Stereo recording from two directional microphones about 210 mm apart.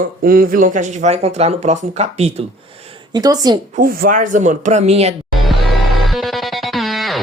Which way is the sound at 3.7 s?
45° right (ahead or behind).